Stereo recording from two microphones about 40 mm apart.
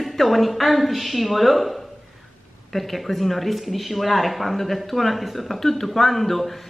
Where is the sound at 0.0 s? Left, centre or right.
Centre.